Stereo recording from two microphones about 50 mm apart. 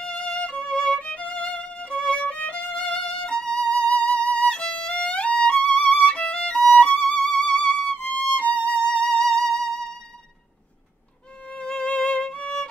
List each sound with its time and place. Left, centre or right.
0.0 s violin: centre
1.8 s violin: centre
2.1 s violin: left; by 3.7 s centre
3.7 s violin: left
7.0 s music: centre
9.0 s music: centre
11.4 s music: centre